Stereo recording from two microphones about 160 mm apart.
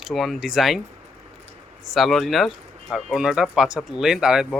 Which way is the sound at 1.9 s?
Centre (ahead or behind).